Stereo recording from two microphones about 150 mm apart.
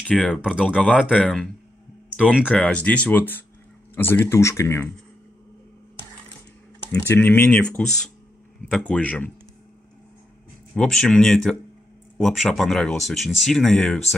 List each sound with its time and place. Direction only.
0.0 s speech: 5° left (ahead or behind)
2.5 s speech: 10° left (ahead or behind)
6.9 s speech: 15° left (ahead or behind)
10.7 s speech: 5° left (ahead or behind)